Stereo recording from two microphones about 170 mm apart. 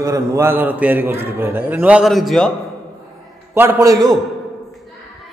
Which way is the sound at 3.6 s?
15° right (ahead or behind).